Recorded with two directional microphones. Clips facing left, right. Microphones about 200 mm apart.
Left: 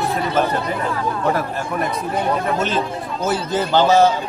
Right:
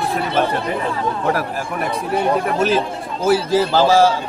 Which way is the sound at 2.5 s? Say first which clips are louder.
Right 3 dB; 10° right (ahead or behind).